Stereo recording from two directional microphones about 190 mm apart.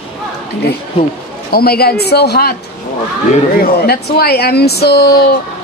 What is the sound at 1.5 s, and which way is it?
Speech, 55° left (ahead or behind).